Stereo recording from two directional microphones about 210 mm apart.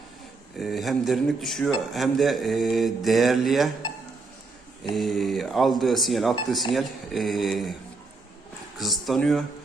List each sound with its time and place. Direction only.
0.5 s speech: centre (ahead or behind)
4.9 s speech: centre (ahead or behind)
8.8 s speech: centre (ahead or behind)